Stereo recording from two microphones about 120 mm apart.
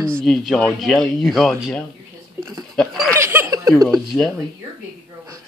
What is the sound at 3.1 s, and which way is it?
Giggle, 20° right (ahead or behind).